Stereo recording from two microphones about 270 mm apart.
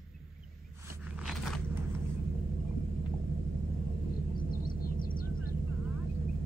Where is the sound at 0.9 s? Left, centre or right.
Centre.